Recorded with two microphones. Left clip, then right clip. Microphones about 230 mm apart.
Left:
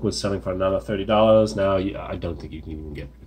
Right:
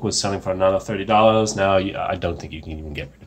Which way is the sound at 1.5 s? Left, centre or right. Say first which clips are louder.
Right 3 dB; centre.